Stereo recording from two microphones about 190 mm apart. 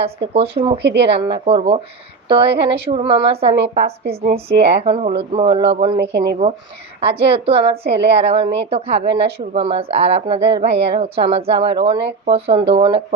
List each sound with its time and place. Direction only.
0.0 s a woman's voice: 30° right (ahead or behind)
0.8 s speech: 65° right (ahead or behind)
1.2 s speech: 25° right (ahead or behind)
4.0 s speech: 55° right (ahead or behind)
4.4 s a woman's voice: 30° right (ahead or behind)
6.0 s speech: 60° right (ahead or behind)
7.0 s a woman's voice: 30° right (ahead or behind)